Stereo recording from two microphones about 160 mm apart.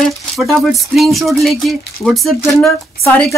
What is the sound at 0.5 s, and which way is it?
Speech, centre (ahead or behind).